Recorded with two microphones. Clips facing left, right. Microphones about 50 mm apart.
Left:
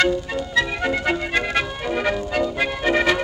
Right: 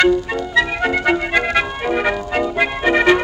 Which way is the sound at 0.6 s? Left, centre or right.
Right.